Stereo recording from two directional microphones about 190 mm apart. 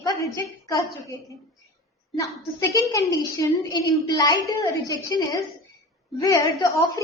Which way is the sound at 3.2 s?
20° left (ahead or behind).